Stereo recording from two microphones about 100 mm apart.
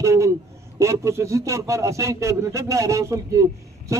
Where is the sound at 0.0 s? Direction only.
30° right (ahead or behind).